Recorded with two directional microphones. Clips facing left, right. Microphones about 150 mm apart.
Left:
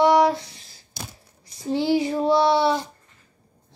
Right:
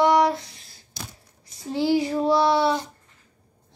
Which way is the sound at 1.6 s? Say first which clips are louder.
Left 1 dB; centre (ahead or behind).